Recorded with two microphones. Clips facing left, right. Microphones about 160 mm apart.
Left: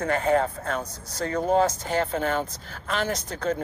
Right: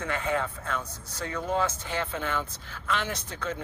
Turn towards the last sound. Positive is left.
turn(degrees=40)  # may be behind; listen again after turning